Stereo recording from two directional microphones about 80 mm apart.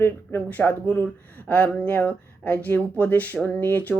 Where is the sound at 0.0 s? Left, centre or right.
Left.